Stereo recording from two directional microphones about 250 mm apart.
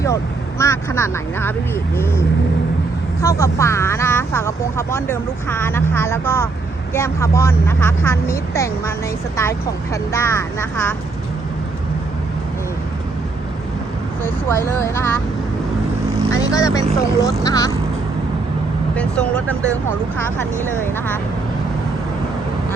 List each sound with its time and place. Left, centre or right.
0.6 s speech: centre
14.3 s speech: centre
16.3 s speech: centre
18.9 s speech: centre
20.8 s speech: centre